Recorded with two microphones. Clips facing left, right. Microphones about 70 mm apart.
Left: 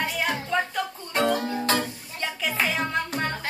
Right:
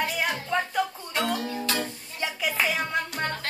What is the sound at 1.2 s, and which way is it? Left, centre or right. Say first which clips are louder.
Music: left 5 dB; left.